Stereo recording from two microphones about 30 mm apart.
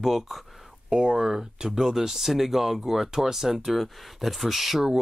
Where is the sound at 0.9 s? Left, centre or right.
Right.